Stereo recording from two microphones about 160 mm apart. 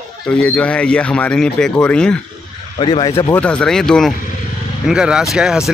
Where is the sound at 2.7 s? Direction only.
30° left (ahead or behind).